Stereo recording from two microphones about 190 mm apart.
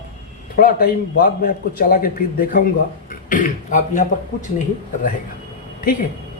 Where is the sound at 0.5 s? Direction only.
50° left (ahead or behind).